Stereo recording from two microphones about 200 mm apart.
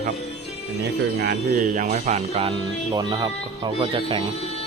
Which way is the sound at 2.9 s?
20° right (ahead or behind).